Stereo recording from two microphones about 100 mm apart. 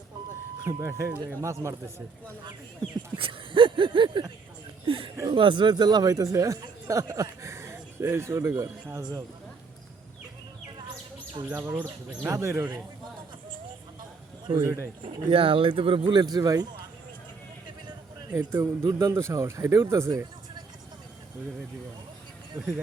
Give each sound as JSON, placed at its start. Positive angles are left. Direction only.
{"t": 0.6, "sound": "speech", "side_deg": -30}
{"t": 3.2, "sound": "a sound", "side_deg": -60}
{"t": 4.9, "sound": "speech", "side_deg": -60}
{"t": 11.4, "sound": "speech", "side_deg": -20}
{"t": 14.6, "sound": "speech", "side_deg": -30}
{"t": 15.1, "sound": "speech", "side_deg": -65}
{"t": 18.3, "sound": "speech", "side_deg": -30}
{"t": 22.5, "sound": "speech", "side_deg": -25}